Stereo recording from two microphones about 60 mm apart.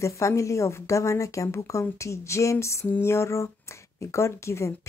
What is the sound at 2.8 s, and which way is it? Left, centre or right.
Speech, left.